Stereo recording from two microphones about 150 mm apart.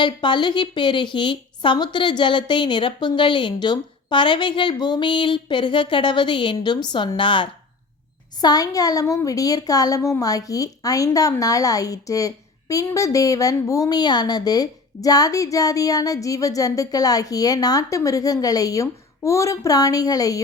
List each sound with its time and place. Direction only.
0.0 s a woman's voice: 30° left (ahead or behind)